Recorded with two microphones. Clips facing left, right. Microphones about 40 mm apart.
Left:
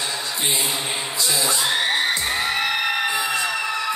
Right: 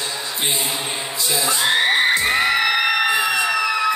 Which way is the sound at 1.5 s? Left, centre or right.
Right.